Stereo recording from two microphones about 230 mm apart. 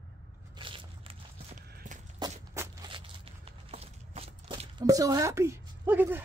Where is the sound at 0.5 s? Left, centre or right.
Right.